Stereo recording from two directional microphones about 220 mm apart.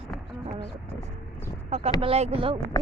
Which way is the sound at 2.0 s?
25° right (ahead or behind).